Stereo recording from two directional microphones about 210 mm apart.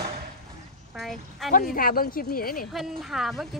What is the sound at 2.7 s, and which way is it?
Speech, centre (ahead or behind).